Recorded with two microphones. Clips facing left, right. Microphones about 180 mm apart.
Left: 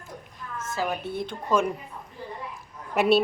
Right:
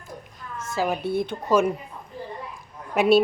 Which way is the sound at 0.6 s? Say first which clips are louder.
Right 4 dB; 10° right (ahead or behind).